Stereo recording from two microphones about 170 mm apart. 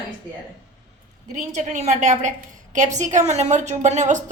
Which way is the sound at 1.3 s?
45° right (ahead or behind).